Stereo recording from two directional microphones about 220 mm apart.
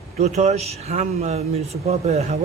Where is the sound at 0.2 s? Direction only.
30° right (ahead or behind).